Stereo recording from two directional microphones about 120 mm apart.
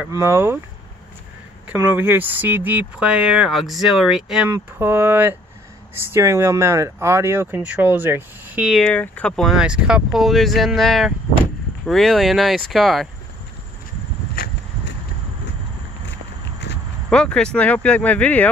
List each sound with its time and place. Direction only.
0.1 s speech: 25° right (ahead or behind)
1.8 s speech: 20° right (ahead or behind)
4.5 s speech: 20° right (ahead or behind)
8.8 s speech: 10° left (ahead or behind)
9.5 s speech: 5° right (ahead or behind)
17.1 s speech: 5° left (ahead or behind)